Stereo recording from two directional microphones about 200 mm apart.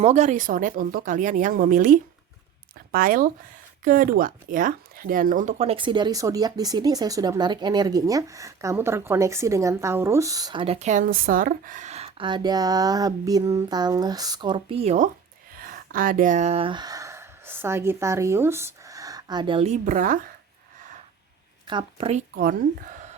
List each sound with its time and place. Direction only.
0.0 s speech: 35° right (ahead or behind)
15.5 s speech: 45° right (ahead or behind)
21.7 s speech: 25° right (ahead or behind)